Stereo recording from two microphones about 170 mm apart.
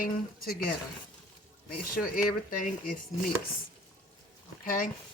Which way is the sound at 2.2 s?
55° left (ahead or behind).